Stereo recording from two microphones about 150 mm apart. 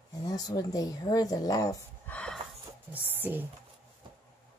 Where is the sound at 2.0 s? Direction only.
10° left (ahead or behind).